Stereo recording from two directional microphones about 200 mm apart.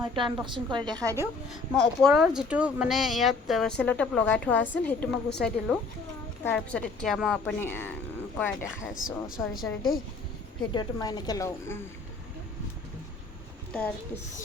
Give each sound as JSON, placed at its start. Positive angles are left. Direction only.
{"t": 0.0, "sound": "a woman's voice", "side_deg": -25}
{"t": 1.5, "sound": "a woman's voice", "side_deg": 0}
{"t": 9.0, "sound": "a woman's voice", "side_deg": 45}
{"t": 10.8, "sound": "a woman's voice", "side_deg": 20}